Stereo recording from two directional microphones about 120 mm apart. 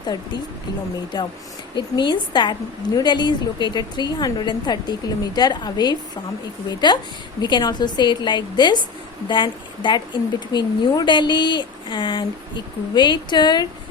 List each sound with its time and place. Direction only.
1.1 s a woman's voice: 35° left (ahead or behind)